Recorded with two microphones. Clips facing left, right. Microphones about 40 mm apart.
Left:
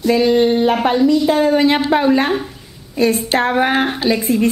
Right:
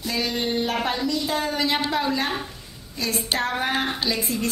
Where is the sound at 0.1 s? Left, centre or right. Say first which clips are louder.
Left 13 dB; left.